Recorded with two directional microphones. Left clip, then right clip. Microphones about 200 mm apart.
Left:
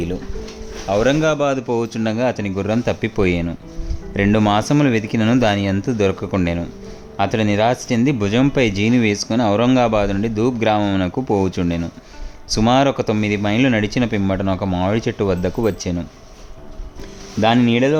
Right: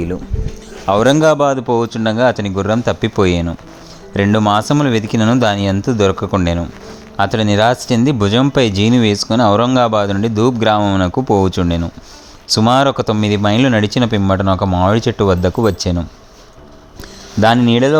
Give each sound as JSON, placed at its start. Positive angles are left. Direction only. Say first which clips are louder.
{"t": 0.9, "sound": "a man's voice", "louder": "right 6 dB", "side_deg": -35}
{"t": 1.5, "sound": "speech", "louder": "right 5 dB", "side_deg": -10}
{"t": 17.7, "sound": "speech", "louder": "right 4 dB", "side_deg": -15}